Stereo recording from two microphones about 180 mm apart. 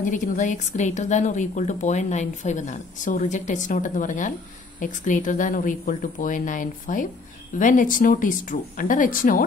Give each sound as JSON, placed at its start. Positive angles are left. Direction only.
{"t": 0.0, "sound": "a woman's voice", "side_deg": 45}